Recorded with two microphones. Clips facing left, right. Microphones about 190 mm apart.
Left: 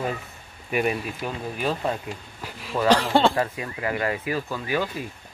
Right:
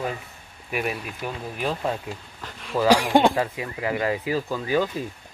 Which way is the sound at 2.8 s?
10° right (ahead or behind).